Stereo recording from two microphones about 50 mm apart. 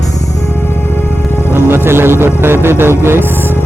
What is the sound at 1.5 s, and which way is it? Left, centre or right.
Speech, right.